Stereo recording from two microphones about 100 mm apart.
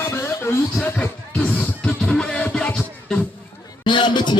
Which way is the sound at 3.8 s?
50° left (ahead or behind).